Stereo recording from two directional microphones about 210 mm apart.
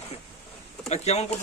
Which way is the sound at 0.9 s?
30° left (ahead or behind).